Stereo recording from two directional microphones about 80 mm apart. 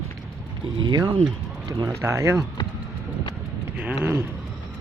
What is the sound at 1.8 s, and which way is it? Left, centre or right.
Speech, right.